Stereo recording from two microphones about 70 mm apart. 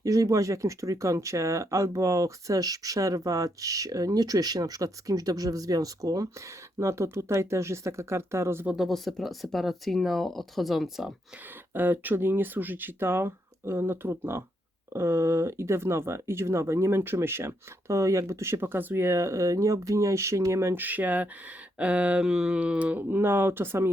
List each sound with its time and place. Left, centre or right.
0.0 s speech: right
6.7 s speech: right
8.7 s speech: centre
11.7 s speech: right
20.8 s speech: right